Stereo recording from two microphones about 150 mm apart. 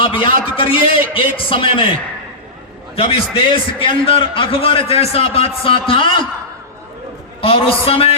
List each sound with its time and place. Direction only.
0.0 s a man's voice: 35° left (ahead or behind)
7.4 s a man's voice: 40° left (ahead or behind)